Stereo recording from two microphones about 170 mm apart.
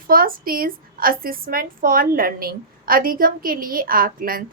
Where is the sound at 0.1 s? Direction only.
55° right (ahead or behind).